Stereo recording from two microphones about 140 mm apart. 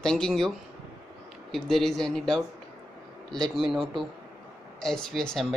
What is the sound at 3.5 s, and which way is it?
Speech, centre (ahead or behind).